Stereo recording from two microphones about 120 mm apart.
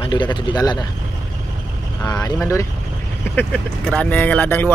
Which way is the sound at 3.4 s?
10° left (ahead or behind).